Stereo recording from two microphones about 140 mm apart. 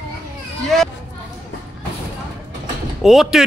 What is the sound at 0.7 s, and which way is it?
Speech, centre (ahead or behind).